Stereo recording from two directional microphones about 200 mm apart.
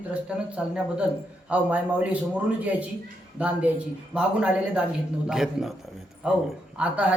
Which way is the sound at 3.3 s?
5° right (ahead or behind).